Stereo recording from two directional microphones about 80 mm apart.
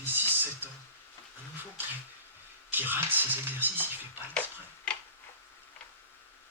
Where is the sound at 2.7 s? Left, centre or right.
Right.